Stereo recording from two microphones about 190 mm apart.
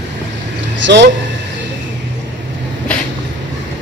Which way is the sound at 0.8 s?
65° right (ahead or behind).